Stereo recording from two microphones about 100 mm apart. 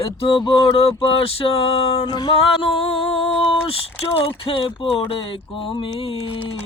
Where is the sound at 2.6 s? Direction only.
75° left (ahead or behind).